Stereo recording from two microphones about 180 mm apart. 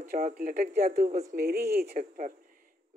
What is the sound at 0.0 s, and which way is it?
Speech, 55° right (ahead or behind).